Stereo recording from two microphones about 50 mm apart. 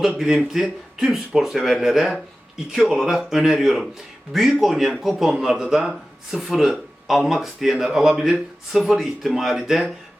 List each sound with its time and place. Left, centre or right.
0.5 s speech: centre